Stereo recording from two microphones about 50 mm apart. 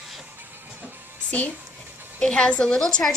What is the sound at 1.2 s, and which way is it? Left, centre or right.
A woman's voice, left.